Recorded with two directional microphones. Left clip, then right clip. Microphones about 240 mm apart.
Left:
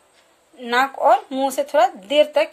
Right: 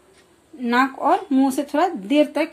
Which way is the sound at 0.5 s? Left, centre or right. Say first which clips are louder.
Even; left.